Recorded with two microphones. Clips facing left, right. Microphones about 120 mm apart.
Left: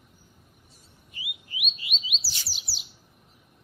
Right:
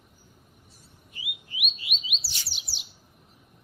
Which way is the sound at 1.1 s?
Centre (ahead or behind).